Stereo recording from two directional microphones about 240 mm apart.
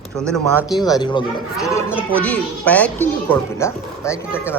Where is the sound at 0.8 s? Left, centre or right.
Centre.